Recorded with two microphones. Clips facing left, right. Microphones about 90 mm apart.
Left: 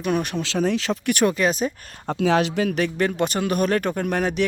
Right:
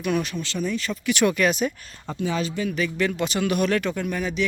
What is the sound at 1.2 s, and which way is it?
Speech, 30° left (ahead or behind).